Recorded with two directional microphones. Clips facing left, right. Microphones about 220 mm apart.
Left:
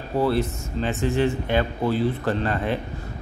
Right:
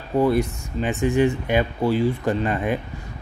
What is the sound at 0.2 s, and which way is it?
Speech, 15° right (ahead or behind).